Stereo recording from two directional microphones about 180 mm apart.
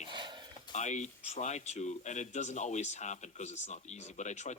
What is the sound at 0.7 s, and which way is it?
Speech, 40° left (ahead or behind).